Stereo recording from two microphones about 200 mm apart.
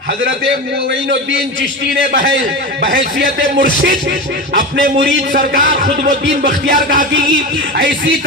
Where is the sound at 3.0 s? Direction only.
45° right (ahead or behind).